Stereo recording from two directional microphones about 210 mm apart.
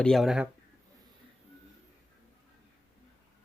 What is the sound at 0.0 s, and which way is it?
Speech, centre (ahead or behind).